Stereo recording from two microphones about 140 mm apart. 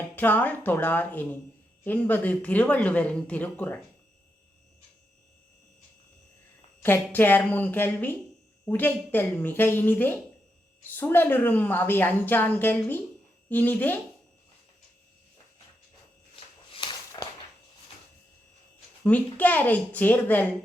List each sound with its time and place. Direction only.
0.2 s a woman's voice: 15° left (ahead or behind)
6.8 s a woman's voice: 15° left (ahead or behind)
16.3 s a sound: 35° left (ahead or behind)
19.0 s a woman's voice: 10° left (ahead or behind)